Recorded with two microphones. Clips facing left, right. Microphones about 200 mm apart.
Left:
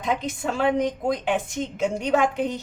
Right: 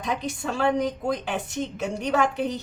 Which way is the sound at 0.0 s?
20° left (ahead or behind).